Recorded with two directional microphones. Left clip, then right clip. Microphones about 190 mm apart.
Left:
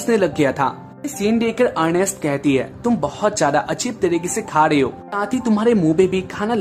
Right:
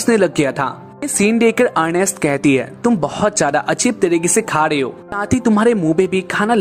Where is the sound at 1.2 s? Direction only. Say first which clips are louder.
Right 4 dB; 45° right (ahead or behind).